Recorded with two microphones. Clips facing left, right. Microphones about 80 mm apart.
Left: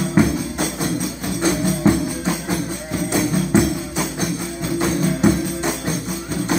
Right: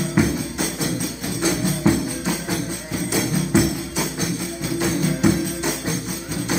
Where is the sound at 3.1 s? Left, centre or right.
Left.